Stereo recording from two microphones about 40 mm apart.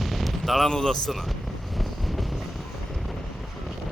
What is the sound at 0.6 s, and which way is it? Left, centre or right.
Speech, centre.